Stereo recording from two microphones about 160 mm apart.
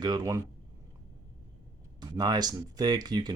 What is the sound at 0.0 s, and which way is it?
Speech, 25° right (ahead or behind).